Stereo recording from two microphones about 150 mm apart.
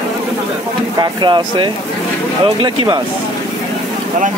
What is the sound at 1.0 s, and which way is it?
Speech, 30° right (ahead or behind).